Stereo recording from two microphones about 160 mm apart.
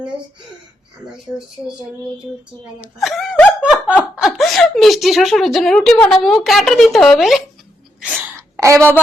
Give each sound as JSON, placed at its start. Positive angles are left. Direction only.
{"t": 2.8, "sound": "a woman's voice", "side_deg": 0}
{"t": 3.6, "sound": "laughter", "side_deg": -10}
{"t": 4.2, "sound": "a woman's voice", "side_deg": 0}
{"t": 8.0, "sound": "wail", "side_deg": -10}
{"t": 8.5, "sound": "a woman's voice", "side_deg": -20}